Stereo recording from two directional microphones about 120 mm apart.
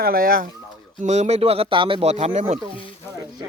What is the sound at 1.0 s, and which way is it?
Speech, 70° right (ahead or behind).